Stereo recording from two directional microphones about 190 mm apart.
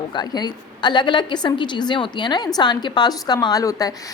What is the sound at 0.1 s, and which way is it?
A woman's voice, 20° left (ahead or behind).